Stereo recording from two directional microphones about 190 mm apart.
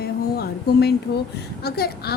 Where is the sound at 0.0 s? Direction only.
55° left (ahead or behind).